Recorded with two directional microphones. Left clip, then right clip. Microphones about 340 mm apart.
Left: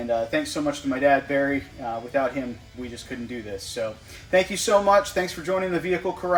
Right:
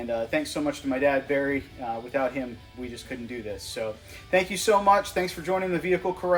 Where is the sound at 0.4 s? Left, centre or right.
Centre.